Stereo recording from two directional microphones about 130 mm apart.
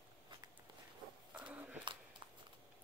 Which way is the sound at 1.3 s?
10° right (ahead or behind).